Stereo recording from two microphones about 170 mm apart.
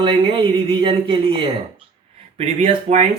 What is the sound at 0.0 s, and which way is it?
Speech, 30° right (ahead or behind).